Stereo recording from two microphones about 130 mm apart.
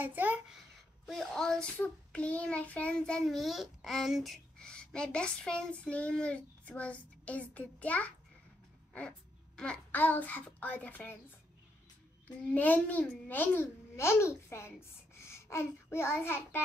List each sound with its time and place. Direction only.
0.0 s a child's voice: 15° right (ahead or behind)
1.0 s child singing: 5° left (ahead or behind)
9.6 s child singing: 10° left (ahead or behind)
12.4 s a child's voice: 10° left (ahead or behind)